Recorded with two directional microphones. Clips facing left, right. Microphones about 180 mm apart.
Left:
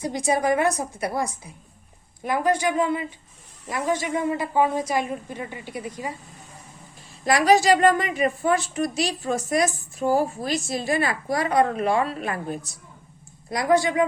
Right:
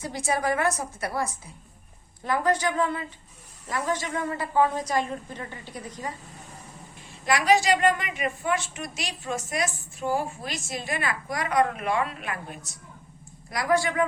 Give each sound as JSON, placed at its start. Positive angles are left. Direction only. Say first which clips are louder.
{"t": 0.0, "sound": "a woman's voice", "louder": "left 4 dB", "side_deg": 15}
{"t": 7.3, "sound": "a woman's voice", "louder": "left 4 dB", "side_deg": 35}
{"t": 13.5, "sound": "a woman's voice", "louder": "left 4 dB", "side_deg": 25}